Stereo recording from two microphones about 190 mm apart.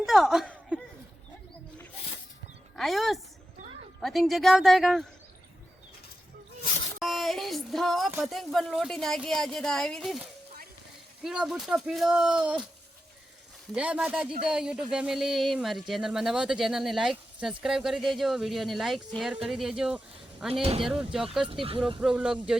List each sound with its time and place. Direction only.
0.0 s a sound: centre (ahead or behind)
2.7 s speech: centre (ahead or behind)
7.0 s a sound: centre (ahead or behind)
8.2 s speech: centre (ahead or behind)
13.7 s speech: 5° right (ahead or behind)
20.5 s speech: 30° right (ahead or behind)
20.8 s speech: centre (ahead or behind)
21.6 s speech: 30° right (ahead or behind)
22.0 s speech: 5° right (ahead or behind)